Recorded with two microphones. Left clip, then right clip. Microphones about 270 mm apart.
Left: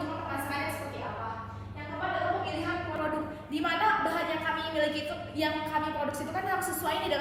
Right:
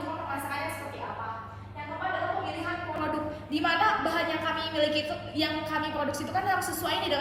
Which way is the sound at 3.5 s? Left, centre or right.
Centre.